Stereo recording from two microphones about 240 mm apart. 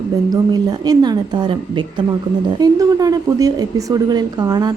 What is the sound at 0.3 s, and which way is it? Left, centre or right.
A woman's voice, centre.